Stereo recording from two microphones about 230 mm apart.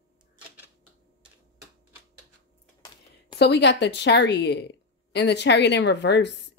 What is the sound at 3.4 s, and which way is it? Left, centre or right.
Speech, left.